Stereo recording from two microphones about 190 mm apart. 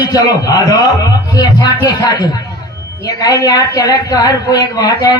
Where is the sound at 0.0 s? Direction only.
20° left (ahead or behind).